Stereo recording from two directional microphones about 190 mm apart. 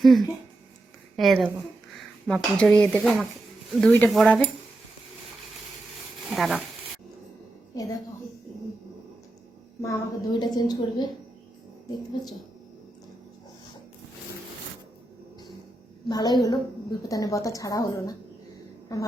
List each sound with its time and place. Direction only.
0.0 s speech: centre (ahead or behind)
6.3 s speech: centre (ahead or behind)
9.8 s a woman's voice: 20° left (ahead or behind)
16.0 s a woman's voice: 20° left (ahead or behind)